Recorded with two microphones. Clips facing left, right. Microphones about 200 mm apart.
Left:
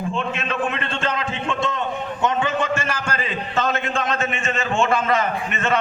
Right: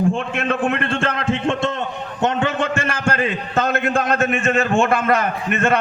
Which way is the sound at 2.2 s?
65° right (ahead or behind).